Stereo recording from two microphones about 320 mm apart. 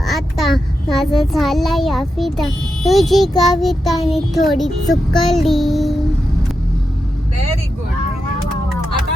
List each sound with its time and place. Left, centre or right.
0.0 s a child's voice: centre
3.6 s child singing: centre